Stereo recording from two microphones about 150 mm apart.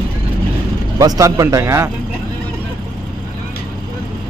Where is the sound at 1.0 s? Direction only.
25° right (ahead or behind).